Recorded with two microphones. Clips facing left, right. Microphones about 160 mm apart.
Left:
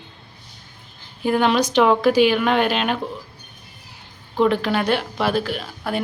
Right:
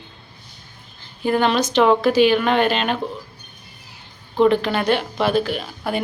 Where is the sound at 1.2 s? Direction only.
10° left (ahead or behind).